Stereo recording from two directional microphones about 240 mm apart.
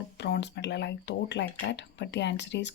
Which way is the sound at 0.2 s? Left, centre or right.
Left.